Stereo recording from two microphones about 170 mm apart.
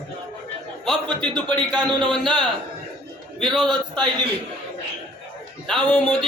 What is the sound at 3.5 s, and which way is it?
Speech, 25° right (ahead or behind).